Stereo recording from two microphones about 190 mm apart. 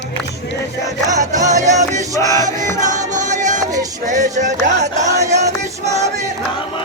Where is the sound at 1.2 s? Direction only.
40° right (ahead or behind).